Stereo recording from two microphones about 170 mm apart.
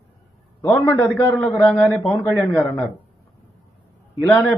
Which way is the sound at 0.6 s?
15° left (ahead or behind).